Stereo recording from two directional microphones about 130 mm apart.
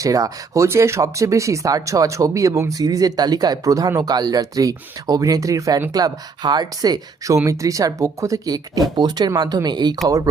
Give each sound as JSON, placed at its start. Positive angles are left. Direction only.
{"t": 0.0, "sound": "speech", "side_deg": -25}